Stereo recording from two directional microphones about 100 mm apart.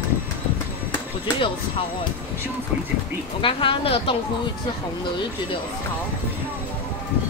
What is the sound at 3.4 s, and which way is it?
Speech, 60° left (ahead or behind).